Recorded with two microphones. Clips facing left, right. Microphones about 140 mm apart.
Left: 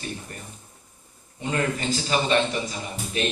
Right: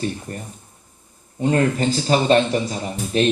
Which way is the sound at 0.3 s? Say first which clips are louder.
Right 8 dB; 40° right (ahead or behind).